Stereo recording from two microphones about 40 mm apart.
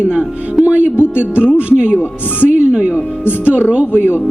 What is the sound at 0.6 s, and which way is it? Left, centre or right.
Speech, right.